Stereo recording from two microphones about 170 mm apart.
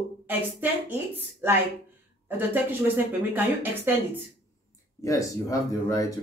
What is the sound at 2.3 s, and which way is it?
Speech, 10° right (ahead or behind).